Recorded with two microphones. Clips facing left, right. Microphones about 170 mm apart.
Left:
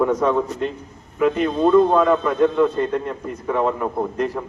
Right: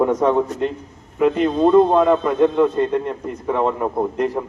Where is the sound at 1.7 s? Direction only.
20° right (ahead or behind).